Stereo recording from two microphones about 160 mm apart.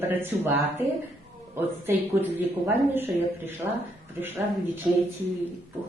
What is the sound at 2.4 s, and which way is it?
Speech, 15° right (ahead or behind).